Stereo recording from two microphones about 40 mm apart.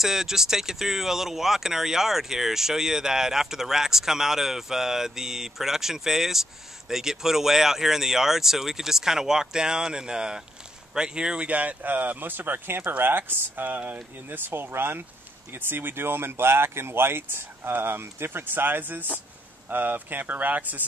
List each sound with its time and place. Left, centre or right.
0.0 s speech: centre
11.4 s speech: right